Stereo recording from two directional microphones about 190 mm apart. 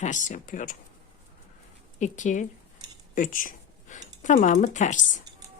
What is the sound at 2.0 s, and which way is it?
Speech, 40° left (ahead or behind).